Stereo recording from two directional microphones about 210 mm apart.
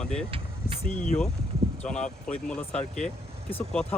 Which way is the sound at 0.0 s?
5° left (ahead or behind).